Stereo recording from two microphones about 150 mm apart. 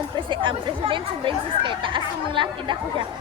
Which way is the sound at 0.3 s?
35° right (ahead or behind).